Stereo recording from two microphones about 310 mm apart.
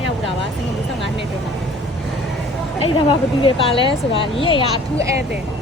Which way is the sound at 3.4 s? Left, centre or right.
Centre.